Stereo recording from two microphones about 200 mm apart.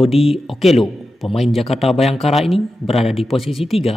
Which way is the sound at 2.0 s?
30° left (ahead or behind).